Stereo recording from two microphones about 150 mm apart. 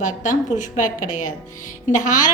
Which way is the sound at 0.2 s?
55° left (ahead or behind).